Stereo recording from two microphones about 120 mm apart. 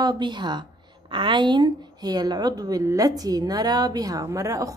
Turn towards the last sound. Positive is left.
turn(degrees=-25)  # may be behind; listen again after turning